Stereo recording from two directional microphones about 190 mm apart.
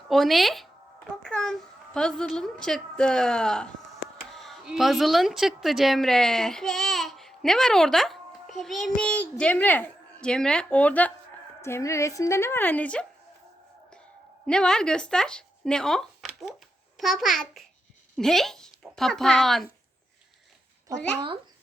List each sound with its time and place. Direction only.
0.1 s a child's voice: centre (ahead or behind)
14.4 s a child's voice: 5° left (ahead or behind)